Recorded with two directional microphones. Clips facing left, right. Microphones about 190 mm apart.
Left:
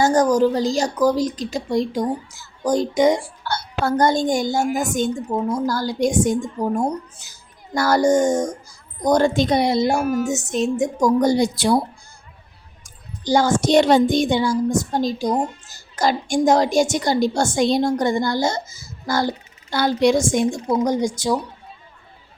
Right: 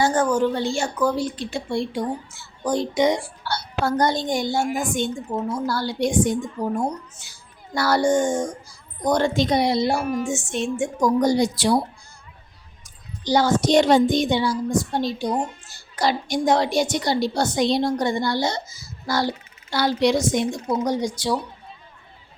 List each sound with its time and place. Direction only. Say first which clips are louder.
0.0 s a woman's voice: left 4 dB; 40° left (ahead or behind)
10.0 s a woman's voice: left 4 dB; centre (ahead or behind)
10.3 s a child's voice: left 4 dB; 40° left (ahead or behind)
13.2 s a child's voice: left 1 dB; 45° left (ahead or behind)